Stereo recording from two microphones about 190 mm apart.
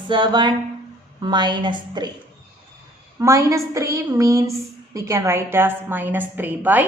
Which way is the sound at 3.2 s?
15° right (ahead or behind).